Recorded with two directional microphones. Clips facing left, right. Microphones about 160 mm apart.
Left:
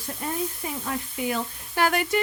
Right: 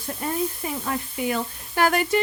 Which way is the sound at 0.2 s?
55° right (ahead or behind).